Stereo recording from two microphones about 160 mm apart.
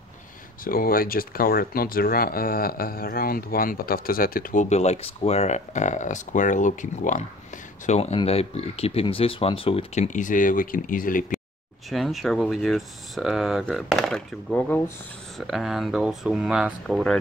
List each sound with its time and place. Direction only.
0.7 s speech: 65° left (ahead or behind)
4.6 s speech: 45° left (ahead or behind)
10.0 s speech: 50° left (ahead or behind)
11.9 s speech: centre (ahead or behind)